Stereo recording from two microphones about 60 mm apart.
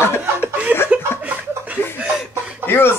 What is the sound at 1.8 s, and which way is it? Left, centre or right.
Chuckle, left.